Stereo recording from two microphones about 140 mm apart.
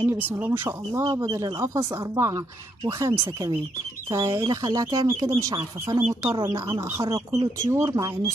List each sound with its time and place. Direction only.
0.0 s speech: 15° right (ahead or behind)